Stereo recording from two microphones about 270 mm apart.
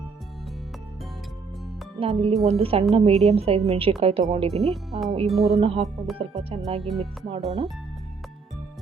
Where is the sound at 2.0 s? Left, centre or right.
Right.